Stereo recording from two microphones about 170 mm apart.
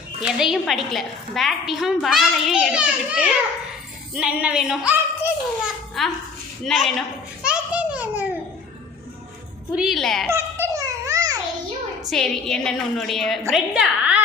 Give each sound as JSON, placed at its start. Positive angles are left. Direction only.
{"t": 0.2, "sound": "a woman's voice", "side_deg": -5}
{"t": 4.1, "sound": "female singing", "side_deg": -5}
{"t": 6.0, "sound": "a woman's voice", "side_deg": 0}
{"t": 7.4, "sound": "a sound", "side_deg": -5}
{"t": 9.7, "sound": "a woman's voice", "side_deg": 0}
{"t": 10.2, "sound": "baby laughter", "side_deg": -15}
{"t": 12.0, "sound": "a woman's voice", "side_deg": 5}